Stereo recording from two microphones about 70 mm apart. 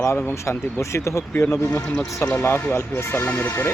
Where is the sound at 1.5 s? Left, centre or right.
Left.